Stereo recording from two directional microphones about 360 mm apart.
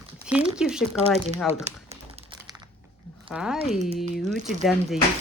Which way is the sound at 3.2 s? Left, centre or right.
Centre.